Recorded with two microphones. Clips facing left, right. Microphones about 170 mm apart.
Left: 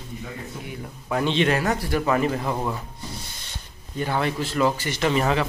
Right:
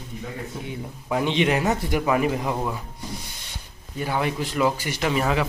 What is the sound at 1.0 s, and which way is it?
Speech, 15° right (ahead or behind).